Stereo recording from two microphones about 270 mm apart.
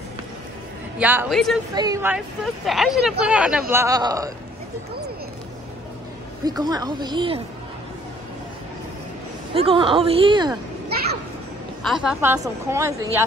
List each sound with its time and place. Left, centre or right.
0.9 s speech: centre
1.8 s a woman's voice: centre
6.4 s a woman's voice: centre
9.5 s a woman's voice: centre
11.8 s a woman's voice: centre